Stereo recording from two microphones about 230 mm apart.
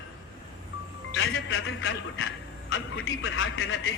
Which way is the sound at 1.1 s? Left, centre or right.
Left.